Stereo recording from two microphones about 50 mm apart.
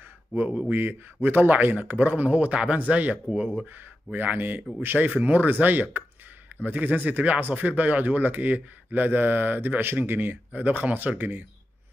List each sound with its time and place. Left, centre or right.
0.7 s speech: right